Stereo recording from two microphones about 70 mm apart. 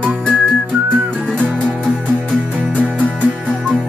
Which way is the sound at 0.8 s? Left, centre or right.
Right.